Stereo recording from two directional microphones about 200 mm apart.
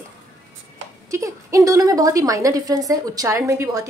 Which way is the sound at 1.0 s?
15° right (ahead or behind).